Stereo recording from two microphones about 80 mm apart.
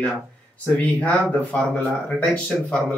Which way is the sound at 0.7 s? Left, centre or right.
Centre.